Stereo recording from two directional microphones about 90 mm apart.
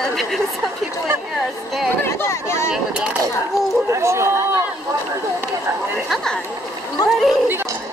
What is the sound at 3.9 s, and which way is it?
Speech, 30° right (ahead or behind).